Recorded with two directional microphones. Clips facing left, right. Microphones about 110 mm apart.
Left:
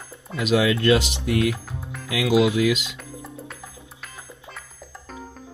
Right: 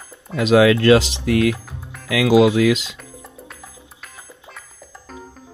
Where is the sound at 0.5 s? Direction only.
80° right.